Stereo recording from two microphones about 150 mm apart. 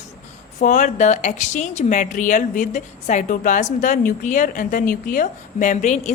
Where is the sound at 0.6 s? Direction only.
60° left (ahead or behind).